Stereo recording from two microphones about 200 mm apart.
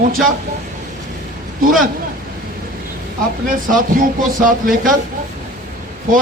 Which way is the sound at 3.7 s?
40° right (ahead or behind).